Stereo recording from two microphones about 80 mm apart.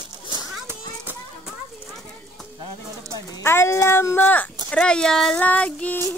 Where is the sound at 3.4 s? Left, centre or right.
Left.